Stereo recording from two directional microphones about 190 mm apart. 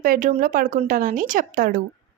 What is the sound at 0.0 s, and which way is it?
A woman's voice, 45° right (ahead or behind).